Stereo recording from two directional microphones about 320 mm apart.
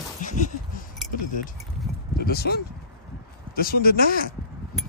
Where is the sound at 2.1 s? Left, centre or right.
Left.